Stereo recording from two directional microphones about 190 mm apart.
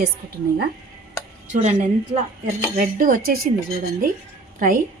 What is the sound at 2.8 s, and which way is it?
Speech, 45° right (ahead or behind).